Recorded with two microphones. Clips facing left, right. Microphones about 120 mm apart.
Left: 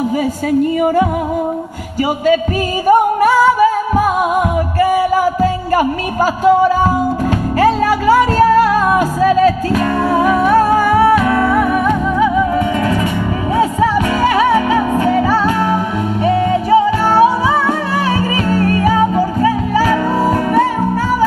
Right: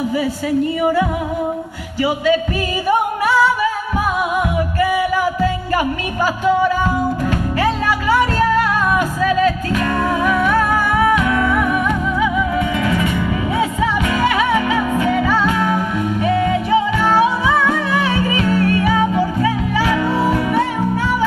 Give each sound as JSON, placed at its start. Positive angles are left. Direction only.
{"t": 2.9, "sound": "music", "side_deg": 45}
{"t": 4.7, "sound": "music", "side_deg": 40}